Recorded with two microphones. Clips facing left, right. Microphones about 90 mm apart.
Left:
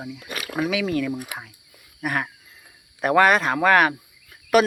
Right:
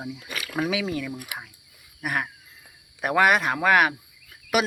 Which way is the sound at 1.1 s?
25° left (ahead or behind).